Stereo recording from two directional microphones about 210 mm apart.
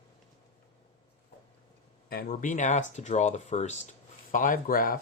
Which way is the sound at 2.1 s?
40° left (ahead or behind).